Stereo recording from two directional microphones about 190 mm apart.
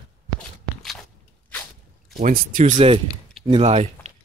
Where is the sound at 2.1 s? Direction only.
45° right (ahead or behind).